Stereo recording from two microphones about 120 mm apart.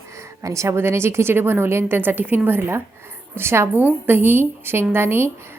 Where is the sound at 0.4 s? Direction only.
25° right (ahead or behind).